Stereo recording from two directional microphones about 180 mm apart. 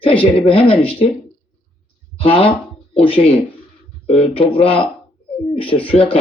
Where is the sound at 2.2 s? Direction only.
30° left (ahead or behind).